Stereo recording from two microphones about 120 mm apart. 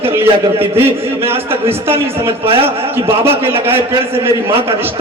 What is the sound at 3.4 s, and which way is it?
A man's voice, 55° right (ahead or behind).